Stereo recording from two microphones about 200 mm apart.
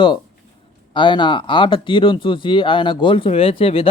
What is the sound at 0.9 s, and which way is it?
Speech, 25° left (ahead or behind).